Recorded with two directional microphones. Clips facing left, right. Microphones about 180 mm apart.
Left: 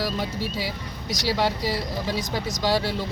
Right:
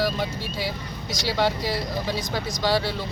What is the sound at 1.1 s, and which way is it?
Speech, 40° left (ahead or behind).